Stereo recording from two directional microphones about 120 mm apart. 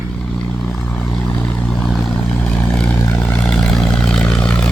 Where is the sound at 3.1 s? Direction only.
10° left (ahead or behind).